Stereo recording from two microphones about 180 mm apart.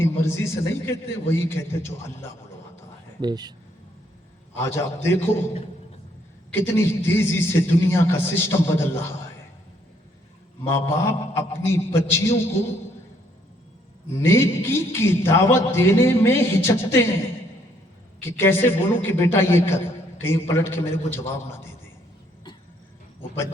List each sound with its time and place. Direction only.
0.0 s a man's voice: 15° left (ahead or behind)
3.2 s speech: 25° right (ahead or behind)
4.5 s a man's voice: 15° left (ahead or behind)
6.6 s a man's voice: 15° left (ahead or behind)
10.7 s a man's voice: 15° left (ahead or behind)
14.2 s a man's voice: 15° left (ahead or behind)
18.2 s a man's voice: 15° left (ahead or behind)